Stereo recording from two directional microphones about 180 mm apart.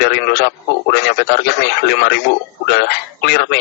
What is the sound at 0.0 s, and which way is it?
A man's voice, 60° left (ahead or behind).